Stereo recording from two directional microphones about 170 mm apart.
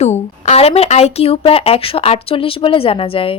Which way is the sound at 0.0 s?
40° left (ahead or behind).